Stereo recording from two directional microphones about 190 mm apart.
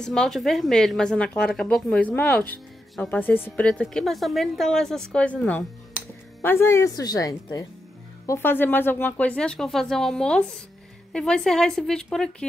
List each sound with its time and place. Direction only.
0.0 s speech: 5° left (ahead or behind)